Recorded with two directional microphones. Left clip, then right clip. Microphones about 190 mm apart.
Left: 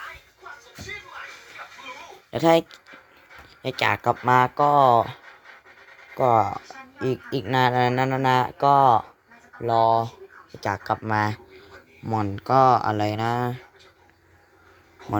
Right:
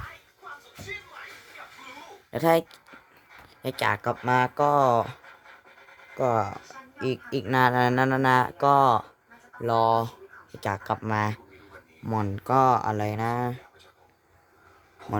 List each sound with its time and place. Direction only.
2.3 s speech: 5° right (ahead or behind)